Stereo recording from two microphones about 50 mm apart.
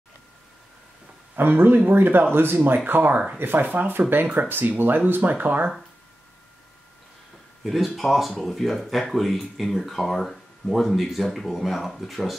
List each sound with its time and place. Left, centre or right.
1.3 s speech: right
7.6 s speech: centre